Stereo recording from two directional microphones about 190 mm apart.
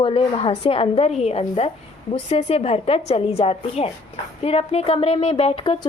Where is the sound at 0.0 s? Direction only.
30° left (ahead or behind).